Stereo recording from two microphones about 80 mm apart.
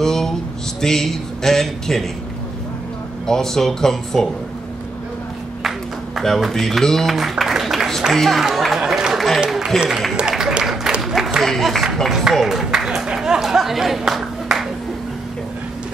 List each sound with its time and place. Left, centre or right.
0.0 s a sound: centre
0.7 s speech: centre
3.3 s speech: centre
6.1 s speech: centre
10.1 s applause: centre